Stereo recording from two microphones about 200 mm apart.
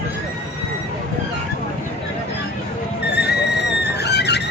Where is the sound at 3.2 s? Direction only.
55° left (ahead or behind).